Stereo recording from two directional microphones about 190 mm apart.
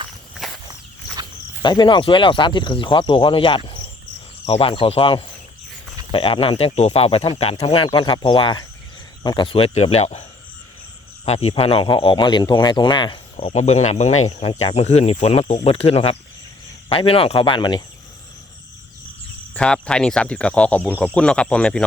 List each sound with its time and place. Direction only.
0.3 s walk: centre (ahead or behind)
1.6 s speech: 25° left (ahead or behind)
11.3 s speech: 30° left (ahead or behind)
19.5 s speech: 5° left (ahead or behind)